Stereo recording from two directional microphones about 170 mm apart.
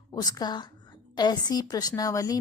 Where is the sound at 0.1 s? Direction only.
25° left (ahead or behind).